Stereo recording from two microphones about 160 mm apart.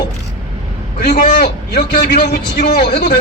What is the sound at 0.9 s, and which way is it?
A man's voice, 65° left (ahead or behind).